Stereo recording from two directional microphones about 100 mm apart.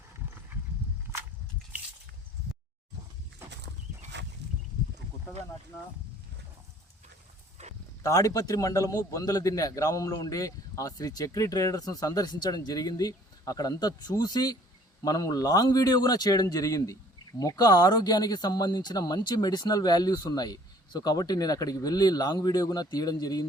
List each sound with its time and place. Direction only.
8.0 s a man's voice: 35° left (ahead or behind)